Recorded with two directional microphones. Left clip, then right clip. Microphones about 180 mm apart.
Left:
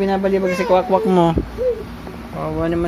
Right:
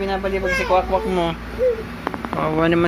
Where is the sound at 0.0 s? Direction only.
70° left (ahead or behind).